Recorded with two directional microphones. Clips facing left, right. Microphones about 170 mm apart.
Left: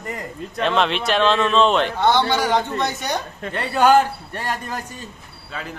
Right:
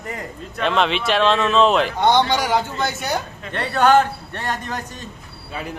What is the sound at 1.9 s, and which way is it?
Speech, 15° right (ahead or behind).